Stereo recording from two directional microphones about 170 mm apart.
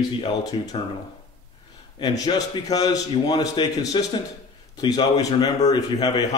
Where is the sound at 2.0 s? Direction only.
20° left (ahead or behind).